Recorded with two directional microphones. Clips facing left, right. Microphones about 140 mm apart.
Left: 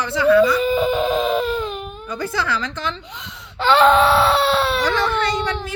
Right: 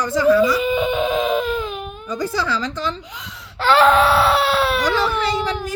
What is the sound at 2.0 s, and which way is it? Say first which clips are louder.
Speech: right 2 dB; 35° right (ahead or behind).